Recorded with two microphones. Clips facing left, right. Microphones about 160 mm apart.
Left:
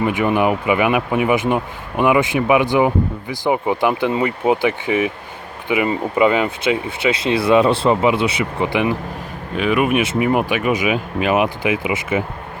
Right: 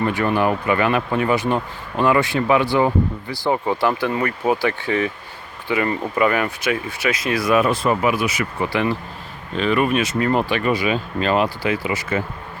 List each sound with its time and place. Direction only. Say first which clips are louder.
0.0 s speech: left 2 dB; 15° left (ahead or behind)